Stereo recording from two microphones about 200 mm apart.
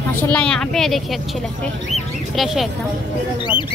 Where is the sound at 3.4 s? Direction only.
25° left (ahead or behind).